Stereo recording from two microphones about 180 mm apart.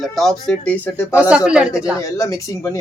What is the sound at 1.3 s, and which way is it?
Speech, 5° right (ahead or behind).